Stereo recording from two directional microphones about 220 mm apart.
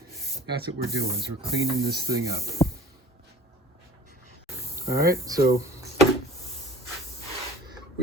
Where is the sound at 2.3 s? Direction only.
15° right (ahead or behind).